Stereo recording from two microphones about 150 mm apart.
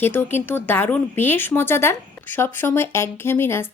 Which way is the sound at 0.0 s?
15° left (ahead or behind).